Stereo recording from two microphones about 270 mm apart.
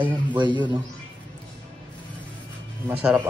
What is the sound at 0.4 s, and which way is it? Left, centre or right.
Speech, centre.